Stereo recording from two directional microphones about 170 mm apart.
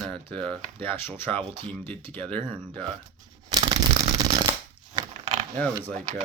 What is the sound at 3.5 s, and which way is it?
Shuffling cards, 20° right (ahead or behind).